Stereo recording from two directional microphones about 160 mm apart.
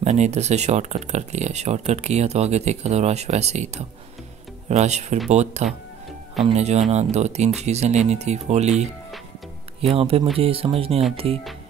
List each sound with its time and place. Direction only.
0.0 s speech: 45° right (ahead or behind)